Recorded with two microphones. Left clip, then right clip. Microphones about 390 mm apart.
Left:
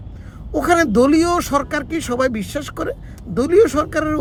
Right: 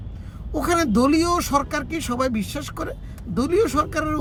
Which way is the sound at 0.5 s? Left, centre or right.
Right.